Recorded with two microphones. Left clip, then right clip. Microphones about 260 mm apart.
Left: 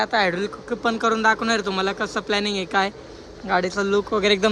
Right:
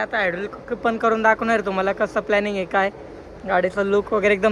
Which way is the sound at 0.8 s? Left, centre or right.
Centre.